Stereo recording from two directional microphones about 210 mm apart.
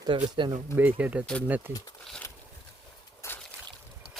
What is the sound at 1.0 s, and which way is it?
Speech, 5° right (ahead or behind).